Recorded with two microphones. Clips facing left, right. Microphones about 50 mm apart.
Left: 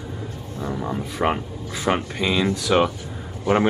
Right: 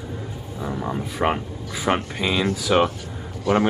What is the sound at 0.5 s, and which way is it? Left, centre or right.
Speech, centre.